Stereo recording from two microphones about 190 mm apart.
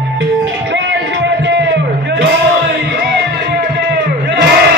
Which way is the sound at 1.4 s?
70° right (ahead or behind).